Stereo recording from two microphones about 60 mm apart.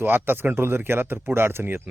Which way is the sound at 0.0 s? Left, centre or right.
Right.